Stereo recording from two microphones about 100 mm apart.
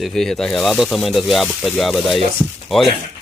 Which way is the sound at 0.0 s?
5° left (ahead or behind).